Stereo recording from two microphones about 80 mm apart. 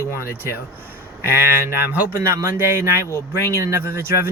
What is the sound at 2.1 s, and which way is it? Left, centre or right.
Speech, right.